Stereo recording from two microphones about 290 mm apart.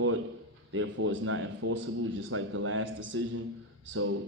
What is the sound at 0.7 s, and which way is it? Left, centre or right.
A man's voice, right.